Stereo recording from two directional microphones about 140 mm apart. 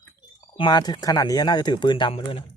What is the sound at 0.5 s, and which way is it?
Speech, 35° left (ahead or behind).